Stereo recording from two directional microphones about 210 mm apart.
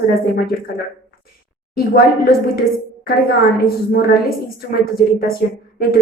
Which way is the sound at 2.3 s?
45° left (ahead or behind).